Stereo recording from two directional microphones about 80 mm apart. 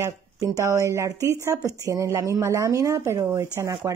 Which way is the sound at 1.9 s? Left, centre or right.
Right.